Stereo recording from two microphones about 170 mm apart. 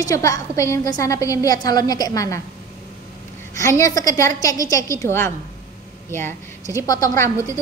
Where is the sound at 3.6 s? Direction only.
15° left (ahead or behind).